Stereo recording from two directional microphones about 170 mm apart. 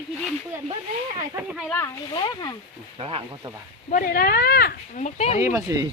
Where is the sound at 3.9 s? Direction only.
60° left (ahead or behind).